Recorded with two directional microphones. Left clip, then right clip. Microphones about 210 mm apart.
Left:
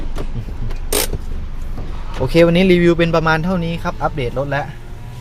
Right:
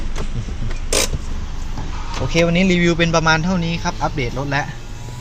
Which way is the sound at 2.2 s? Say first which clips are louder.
Left 5 dB; 25° left (ahead or behind).